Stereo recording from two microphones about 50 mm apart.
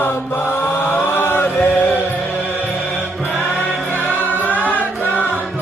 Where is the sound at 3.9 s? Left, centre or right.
Left.